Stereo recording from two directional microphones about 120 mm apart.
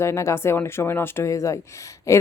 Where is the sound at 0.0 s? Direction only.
25° left (ahead or behind).